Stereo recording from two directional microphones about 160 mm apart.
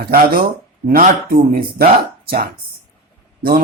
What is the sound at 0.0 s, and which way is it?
Speech, 65° right (ahead or behind).